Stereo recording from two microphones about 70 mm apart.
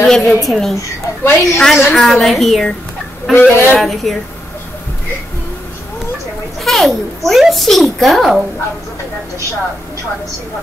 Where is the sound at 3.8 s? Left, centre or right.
Centre.